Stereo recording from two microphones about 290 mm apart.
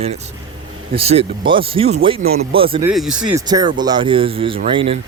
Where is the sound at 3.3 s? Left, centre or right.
Centre.